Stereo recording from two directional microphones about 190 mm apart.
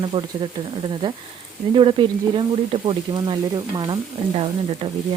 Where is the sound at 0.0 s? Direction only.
25° right (ahead or behind).